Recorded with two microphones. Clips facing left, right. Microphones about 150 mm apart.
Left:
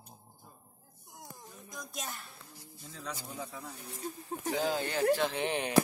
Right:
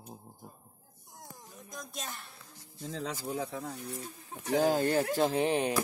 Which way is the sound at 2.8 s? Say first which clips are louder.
Right 7 dB; 90° right.